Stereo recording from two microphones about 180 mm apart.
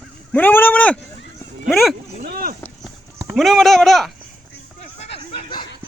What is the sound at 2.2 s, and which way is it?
Vehicle, 55° right (ahead or behind).